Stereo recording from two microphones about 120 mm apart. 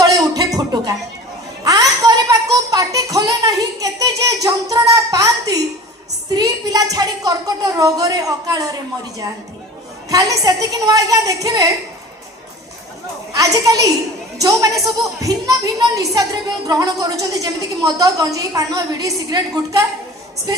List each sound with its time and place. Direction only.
0.0 s music: 30° right (ahead or behind)
1.6 s a sound: 30° right (ahead or behind)
6.3 s a woman's voice: 30° right (ahead or behind)
10.1 s a woman's voice: 30° right (ahead or behind)
13.3 s a woman's voice: 30° right (ahead or behind)